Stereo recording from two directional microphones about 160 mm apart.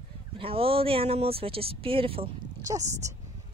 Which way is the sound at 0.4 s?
35° right (ahead or behind).